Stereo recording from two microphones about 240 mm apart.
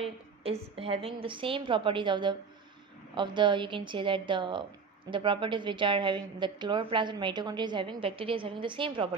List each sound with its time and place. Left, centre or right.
0.0 s a woman's voice: right